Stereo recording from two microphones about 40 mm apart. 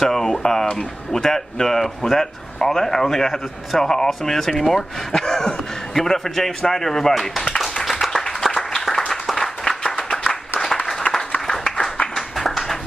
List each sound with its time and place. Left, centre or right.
0.0 s speech: centre
7.8 s clapping: centre
8.1 s applause: centre
9.1 s applause: centre
9.8 s clapping: centre
10.9 s applause: centre
12.2 s clapping: centre